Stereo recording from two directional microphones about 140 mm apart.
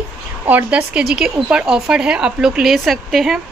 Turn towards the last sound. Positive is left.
turn(degrees=0)  # may be behind; listen again after turning